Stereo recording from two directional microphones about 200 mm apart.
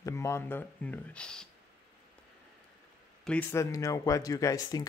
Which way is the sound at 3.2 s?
10° left (ahead or behind).